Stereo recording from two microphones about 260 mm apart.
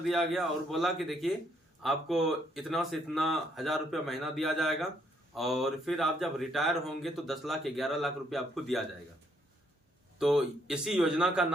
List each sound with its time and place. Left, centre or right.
0.1 s speech: centre
10.2 s speech: centre